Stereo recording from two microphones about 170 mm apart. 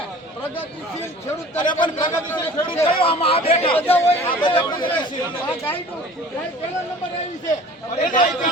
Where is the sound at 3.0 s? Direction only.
35° left (ahead or behind).